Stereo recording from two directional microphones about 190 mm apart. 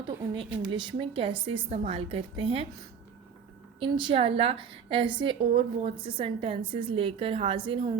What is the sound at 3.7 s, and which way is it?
A woman's voice, 30° right (ahead or behind).